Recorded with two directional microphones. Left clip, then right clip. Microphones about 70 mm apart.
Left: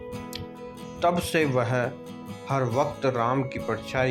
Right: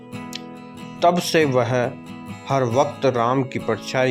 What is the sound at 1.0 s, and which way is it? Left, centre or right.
Speech, right.